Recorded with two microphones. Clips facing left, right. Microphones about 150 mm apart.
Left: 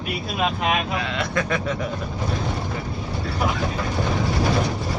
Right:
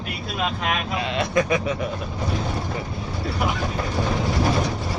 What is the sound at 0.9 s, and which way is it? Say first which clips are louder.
Speech: right 3 dB; 20° right (ahead or behind).